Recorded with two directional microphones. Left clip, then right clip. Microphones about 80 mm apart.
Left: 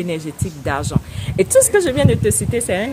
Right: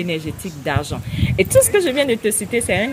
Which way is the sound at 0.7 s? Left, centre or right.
Left.